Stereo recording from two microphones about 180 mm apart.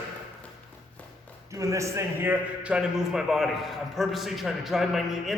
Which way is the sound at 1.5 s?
15° right (ahead or behind).